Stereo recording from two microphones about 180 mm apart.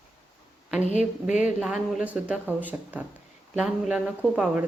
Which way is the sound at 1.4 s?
5° right (ahead or behind).